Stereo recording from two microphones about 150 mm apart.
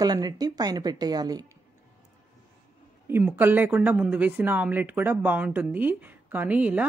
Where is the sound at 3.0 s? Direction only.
15° right (ahead or behind).